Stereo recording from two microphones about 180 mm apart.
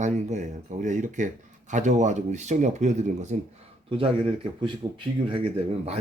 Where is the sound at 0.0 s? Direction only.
40° right (ahead or behind).